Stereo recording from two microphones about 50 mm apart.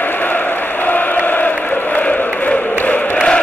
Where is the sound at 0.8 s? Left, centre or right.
Left.